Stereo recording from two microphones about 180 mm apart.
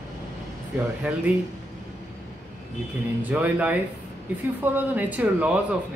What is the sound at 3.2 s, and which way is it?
Speech, 10° right (ahead or behind).